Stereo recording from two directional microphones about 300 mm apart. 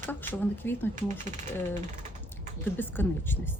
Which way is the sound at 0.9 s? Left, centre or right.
Right.